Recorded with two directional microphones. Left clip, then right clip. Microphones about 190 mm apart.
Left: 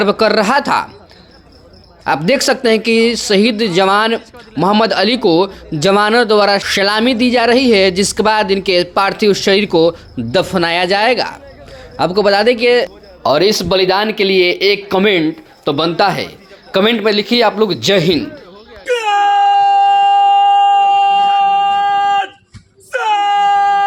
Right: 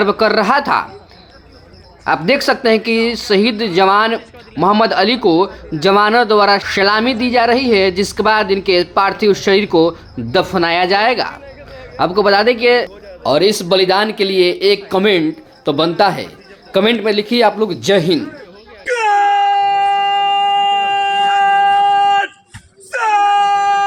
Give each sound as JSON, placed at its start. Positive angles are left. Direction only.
{"t": 0.0, "sound": "a woman's voice", "side_deg": 20}
{"t": 2.0, "sound": "a woman's voice", "side_deg": 20}
{"t": 13.2, "sound": "speech", "side_deg": 5}
{"t": 18.9, "sound": "wail", "side_deg": 65}
{"t": 20.7, "sound": "a sound", "side_deg": 55}
{"t": 22.9, "sound": "wail", "side_deg": 55}